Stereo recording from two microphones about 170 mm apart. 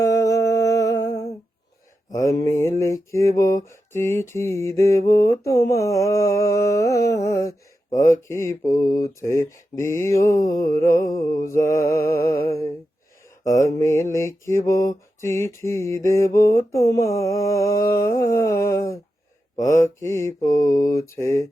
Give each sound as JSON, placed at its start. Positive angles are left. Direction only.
{"t": 0.0, "sound": "humming", "side_deg": 20}
{"t": 2.1, "sound": "mantra", "side_deg": 20}
{"t": 7.9, "sound": "speech", "side_deg": 50}
{"t": 8.3, "sound": "mantra", "side_deg": 15}
{"t": 13.6, "sound": "mantra", "side_deg": 15}
{"t": 19.6, "sound": "speech", "side_deg": 50}
{"t": 20.0, "sound": "mantra", "side_deg": 15}